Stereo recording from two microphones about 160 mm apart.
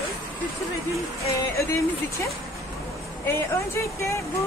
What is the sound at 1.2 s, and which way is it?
Speech, 20° left (ahead or behind).